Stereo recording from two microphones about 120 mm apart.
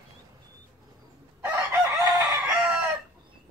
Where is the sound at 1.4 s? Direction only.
20° right (ahead or behind).